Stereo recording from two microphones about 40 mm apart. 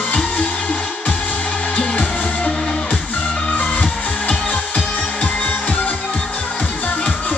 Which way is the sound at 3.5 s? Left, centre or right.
Left.